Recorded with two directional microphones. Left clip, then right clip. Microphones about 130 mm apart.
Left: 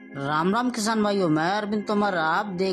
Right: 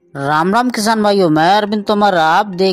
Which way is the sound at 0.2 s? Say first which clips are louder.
Right 11 dB; 55° right (ahead or behind).